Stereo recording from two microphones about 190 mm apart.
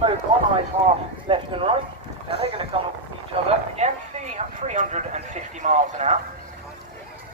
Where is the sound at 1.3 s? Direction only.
30° right (ahead or behind).